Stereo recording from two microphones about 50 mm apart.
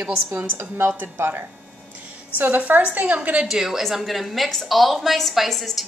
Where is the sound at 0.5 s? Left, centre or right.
Right.